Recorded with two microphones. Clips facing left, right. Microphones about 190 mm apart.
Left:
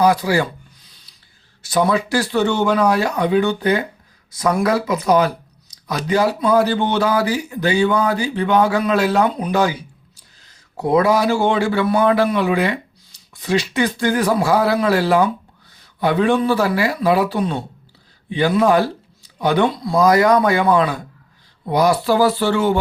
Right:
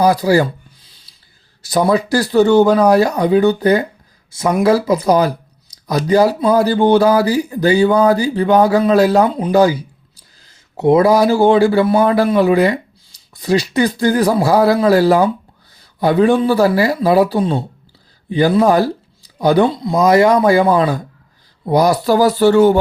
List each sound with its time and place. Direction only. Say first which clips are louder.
0.0 s speech: right 4 dB; 35° right (ahead or behind)
1.6 s speech: right 3 dB; 35° right (ahead or behind)
4.3 s speech: right 4 dB; 25° right (ahead or behind)
10.8 s speech: right 5 dB; 25° right (ahead or behind); by 22.8 s 40° right (ahead or behind)